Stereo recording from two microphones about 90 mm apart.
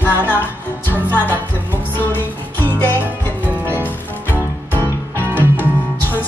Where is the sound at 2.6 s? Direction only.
20° left (ahead or behind).